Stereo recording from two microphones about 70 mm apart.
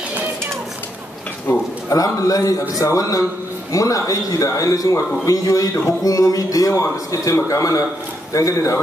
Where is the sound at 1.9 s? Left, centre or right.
Left.